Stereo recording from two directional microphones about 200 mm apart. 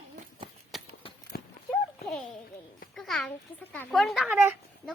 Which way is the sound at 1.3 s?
50° left (ahead or behind).